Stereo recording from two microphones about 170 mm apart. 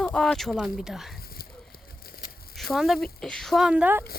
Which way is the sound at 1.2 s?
60° left (ahead or behind).